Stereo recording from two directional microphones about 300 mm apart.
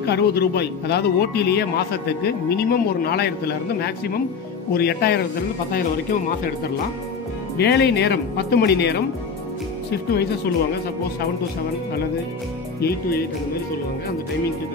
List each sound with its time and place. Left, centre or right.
0.0 s a man's voice: left
7.5 s a man's voice: left